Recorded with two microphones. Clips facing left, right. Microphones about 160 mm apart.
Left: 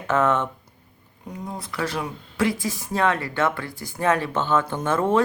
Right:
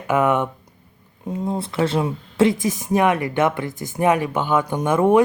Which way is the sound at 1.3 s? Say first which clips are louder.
Right 9 dB; 25° right (ahead or behind).